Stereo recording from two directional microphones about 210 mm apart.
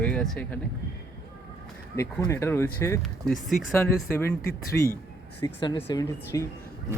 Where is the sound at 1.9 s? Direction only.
15° left (ahead or behind).